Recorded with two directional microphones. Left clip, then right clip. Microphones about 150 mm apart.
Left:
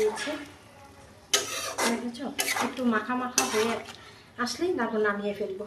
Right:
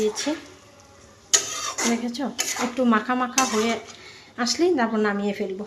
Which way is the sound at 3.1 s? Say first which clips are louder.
Right 7 dB; 70° right (ahead or behind).